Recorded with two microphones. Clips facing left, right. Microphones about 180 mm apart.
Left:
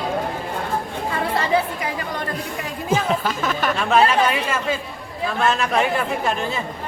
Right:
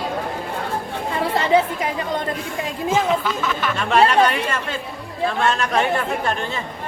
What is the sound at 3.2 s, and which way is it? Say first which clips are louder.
Chatter: left 1 dB; 45° left (ahead or behind).